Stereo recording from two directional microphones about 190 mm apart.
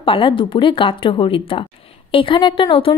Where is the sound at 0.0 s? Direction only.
25° left (ahead or behind).